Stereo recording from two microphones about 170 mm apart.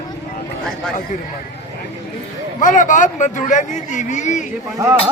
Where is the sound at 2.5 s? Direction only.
50° left (ahead or behind).